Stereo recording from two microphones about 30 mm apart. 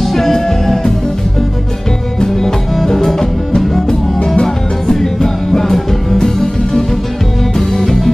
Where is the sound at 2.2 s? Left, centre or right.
Centre.